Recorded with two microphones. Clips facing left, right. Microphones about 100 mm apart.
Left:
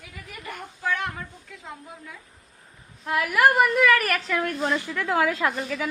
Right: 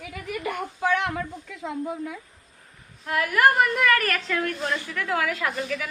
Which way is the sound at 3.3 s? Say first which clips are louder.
Left 1 dB; 5° left (ahead or behind).